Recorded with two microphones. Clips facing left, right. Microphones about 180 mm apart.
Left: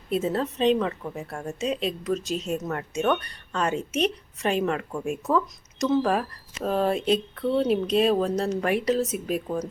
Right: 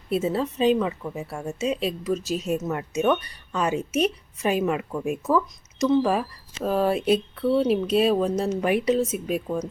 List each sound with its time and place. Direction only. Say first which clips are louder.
0.1 s a woman's voice: right 1 dB; 5° right (ahead or behind)
4.9 s speech: right 2 dB; centre (ahead or behind)